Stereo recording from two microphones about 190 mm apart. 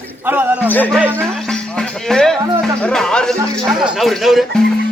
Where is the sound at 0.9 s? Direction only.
10° right (ahead or behind).